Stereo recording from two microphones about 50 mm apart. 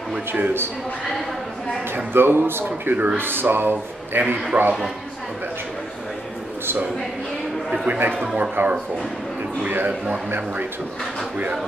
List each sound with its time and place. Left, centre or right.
0.3 s speech: right
2.1 s a man's voice: right
4.5 s a man's voice: centre
8.4 s a man's voice: right